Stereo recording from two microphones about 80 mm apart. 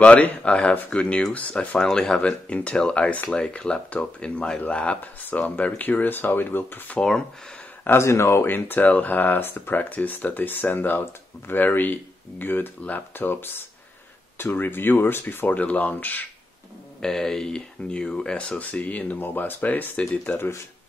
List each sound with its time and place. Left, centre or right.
0.0 s speech: centre
7.0 s speech: centre
7.8 s speech: left
17.0 s speech: centre